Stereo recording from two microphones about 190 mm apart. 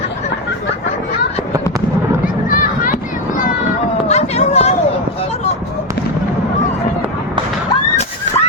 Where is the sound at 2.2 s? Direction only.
45° left (ahead or behind).